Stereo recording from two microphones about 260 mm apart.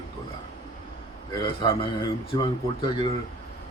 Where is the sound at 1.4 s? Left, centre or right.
Centre.